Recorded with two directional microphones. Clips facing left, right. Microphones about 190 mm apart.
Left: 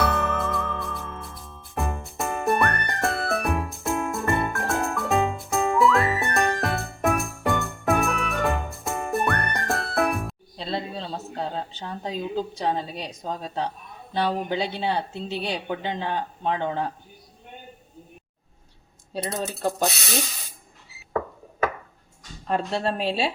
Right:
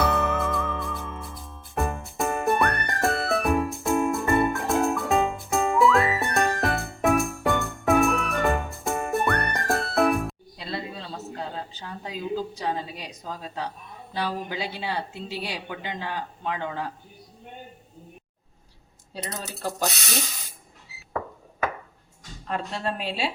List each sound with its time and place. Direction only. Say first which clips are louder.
0.1 s music: right 1 dB; centre (ahead or behind)
10.6 s a sound: left 4 dB; 25° left (ahead or behind)
12.5 s a woman's voice: left 3 dB; 30° left (ahead or behind)
19.1 s a woman's voice: left 6 dB; 30° left (ahead or behind)
22.4 s a woman's voice: left 4 dB; 30° left (ahead or behind)